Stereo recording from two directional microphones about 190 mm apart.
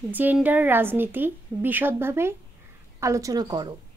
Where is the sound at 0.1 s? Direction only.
10° right (ahead or behind).